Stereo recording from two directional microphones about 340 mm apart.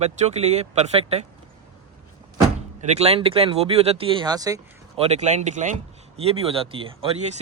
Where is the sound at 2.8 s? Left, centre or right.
Centre.